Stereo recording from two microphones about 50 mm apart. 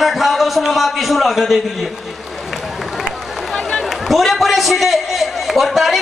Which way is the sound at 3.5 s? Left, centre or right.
Centre.